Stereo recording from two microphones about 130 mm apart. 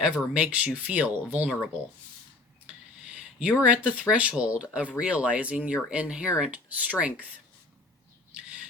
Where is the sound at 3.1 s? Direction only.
10° right (ahead or behind).